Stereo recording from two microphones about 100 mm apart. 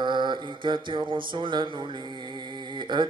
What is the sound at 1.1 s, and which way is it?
Speech, 55° right (ahead or behind).